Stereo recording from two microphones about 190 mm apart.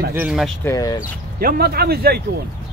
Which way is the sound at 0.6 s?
15° left (ahead or behind).